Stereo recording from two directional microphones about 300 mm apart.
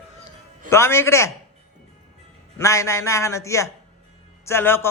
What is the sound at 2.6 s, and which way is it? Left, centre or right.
A man's voice, centre.